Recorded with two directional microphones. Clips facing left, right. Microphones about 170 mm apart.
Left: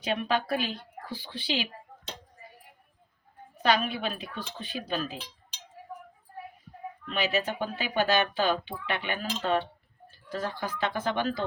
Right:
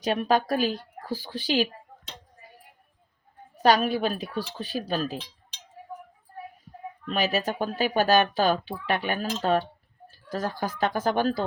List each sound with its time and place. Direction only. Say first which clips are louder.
0.0 s speech: right 5 dB; 40° right (ahead or behind)
3.6 s speech: right 5 dB; 40° right (ahead or behind)
7.1 s speech: right 3 dB; 40° right (ahead or behind)